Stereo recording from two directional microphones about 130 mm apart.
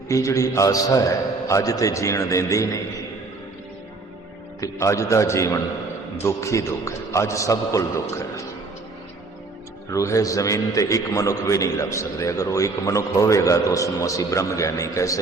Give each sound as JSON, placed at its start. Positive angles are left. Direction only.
{"t": 0.1, "sound": "a man's voice", "side_deg": 25}
{"t": 4.6, "sound": "a man's voice", "side_deg": 25}
{"t": 9.9, "sound": "a man's voice", "side_deg": 25}